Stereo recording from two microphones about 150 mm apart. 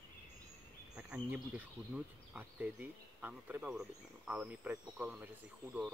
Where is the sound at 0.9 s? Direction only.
10° right (ahead or behind).